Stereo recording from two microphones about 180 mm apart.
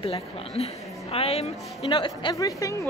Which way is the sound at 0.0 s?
35° left (ahead or behind).